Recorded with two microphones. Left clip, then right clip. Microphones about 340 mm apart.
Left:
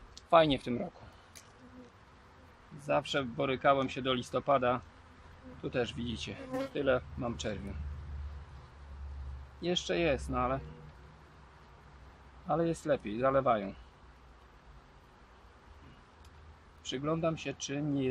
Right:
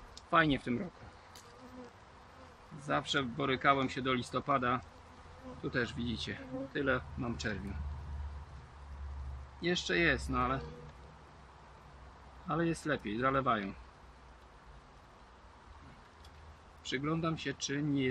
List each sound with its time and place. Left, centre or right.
0.1 s speech: centre
2.9 s speech: centre
9.6 s speech: centre
12.4 s speech: centre
16.8 s speech: centre